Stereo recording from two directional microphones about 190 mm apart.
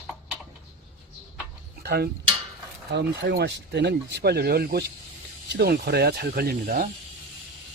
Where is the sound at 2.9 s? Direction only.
65° right (ahead or behind); by 6.9 s 50° right (ahead or behind).